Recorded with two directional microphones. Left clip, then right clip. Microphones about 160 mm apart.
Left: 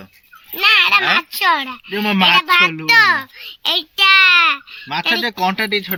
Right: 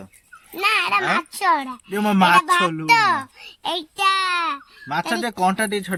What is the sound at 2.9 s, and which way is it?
A child's voice, 45° right (ahead or behind).